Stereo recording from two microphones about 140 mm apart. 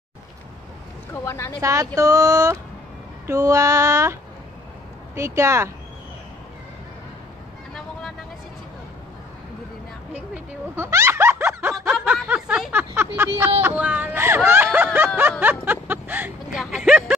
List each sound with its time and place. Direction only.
1.1 s speech: 15° left (ahead or behind)
1.6 s female singing: 20° right (ahead or behind)
10.3 s snicker: 20° right (ahead or behind)
11.7 s snicker: 5° right (ahead or behind)
13.6 s a sound: 15° right (ahead or behind)
16.5 s a sound: centre (ahead or behind)